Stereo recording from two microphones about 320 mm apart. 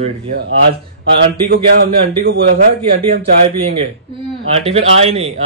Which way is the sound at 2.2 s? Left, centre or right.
Right.